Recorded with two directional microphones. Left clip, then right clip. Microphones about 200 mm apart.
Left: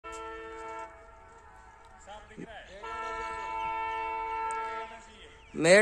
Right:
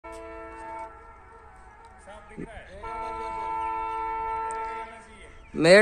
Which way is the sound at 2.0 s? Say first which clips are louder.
Right 3 dB; 40° right (ahead or behind).